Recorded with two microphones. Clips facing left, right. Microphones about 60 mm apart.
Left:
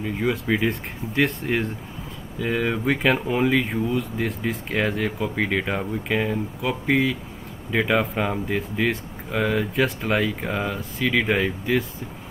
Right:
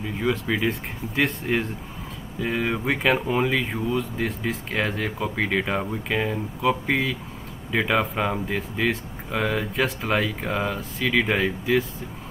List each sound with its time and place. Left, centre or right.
0.2 s speech: centre